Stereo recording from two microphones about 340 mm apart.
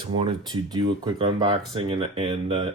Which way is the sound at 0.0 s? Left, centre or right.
Centre.